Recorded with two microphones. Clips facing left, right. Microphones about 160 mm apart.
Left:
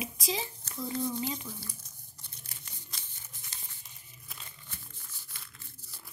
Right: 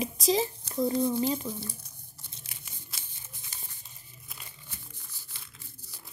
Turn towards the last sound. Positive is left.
turn(degrees=-15)  # may be behind; listen again after turning